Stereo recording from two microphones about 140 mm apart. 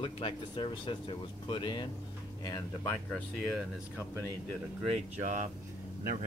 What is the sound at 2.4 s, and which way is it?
Speech, 20° left (ahead or behind).